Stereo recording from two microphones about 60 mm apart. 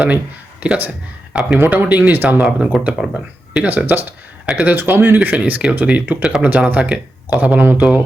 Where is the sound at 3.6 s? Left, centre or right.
Right.